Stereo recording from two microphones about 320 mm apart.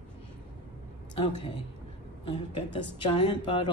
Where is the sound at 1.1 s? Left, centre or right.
Centre.